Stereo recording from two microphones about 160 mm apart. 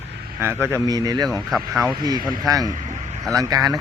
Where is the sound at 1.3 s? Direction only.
Centre (ahead or behind).